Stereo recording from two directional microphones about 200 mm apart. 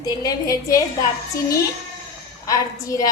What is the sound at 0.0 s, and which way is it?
Speech, 20° left (ahead or behind).